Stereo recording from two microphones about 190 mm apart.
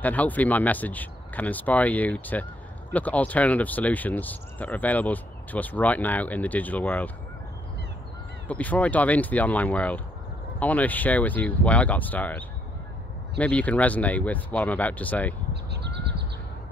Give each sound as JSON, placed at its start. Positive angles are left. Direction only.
{"t": 0.0, "sound": "speech", "side_deg": 10}
{"t": 8.5, "sound": "speech", "side_deg": 10}
{"t": 15.5, "sound": "honk", "side_deg": -60}